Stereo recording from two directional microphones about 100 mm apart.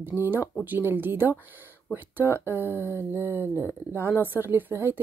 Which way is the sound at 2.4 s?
25° left (ahead or behind).